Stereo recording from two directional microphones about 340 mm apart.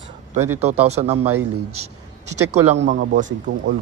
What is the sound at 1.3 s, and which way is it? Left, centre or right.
Speech, right.